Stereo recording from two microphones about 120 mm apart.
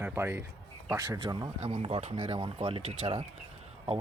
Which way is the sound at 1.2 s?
35° right (ahead or behind).